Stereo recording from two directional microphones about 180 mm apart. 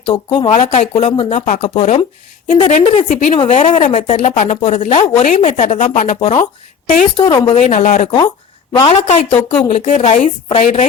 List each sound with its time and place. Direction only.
0.3 s speech: 35° left (ahead or behind)
5.3 s speech: 45° left (ahead or behind)
6.1 s a woman's voice: 30° left (ahead or behind)
6.4 s speech: 45° left (ahead or behind)
7.2 s a woman's voice: 25° left (ahead or behind)
7.5 s speech: 45° left (ahead or behind)
8.7 s a woman's voice: 30° left (ahead or behind)